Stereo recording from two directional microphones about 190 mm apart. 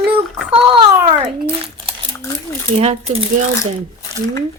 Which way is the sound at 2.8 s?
35° right (ahead or behind).